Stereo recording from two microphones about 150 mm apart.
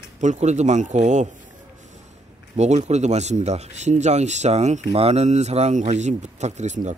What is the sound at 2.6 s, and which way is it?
Speech, 50° right (ahead or behind).